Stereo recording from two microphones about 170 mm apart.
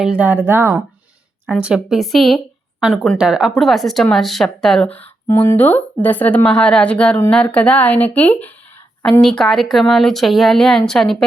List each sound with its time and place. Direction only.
0.0 s speech: 5° right (ahead or behind)